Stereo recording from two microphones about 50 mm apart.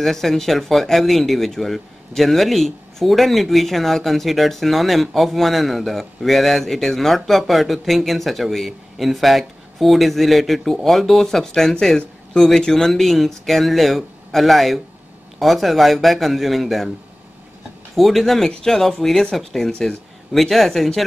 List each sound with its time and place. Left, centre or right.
0.0 s speech: centre
17.9 s speech: centre